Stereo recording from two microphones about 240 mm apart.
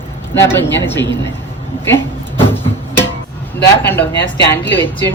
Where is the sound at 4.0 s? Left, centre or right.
Left.